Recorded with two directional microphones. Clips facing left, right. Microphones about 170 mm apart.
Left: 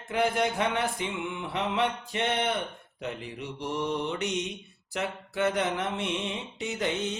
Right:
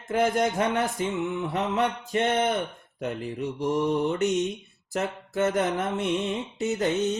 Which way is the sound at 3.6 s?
45° right (ahead or behind).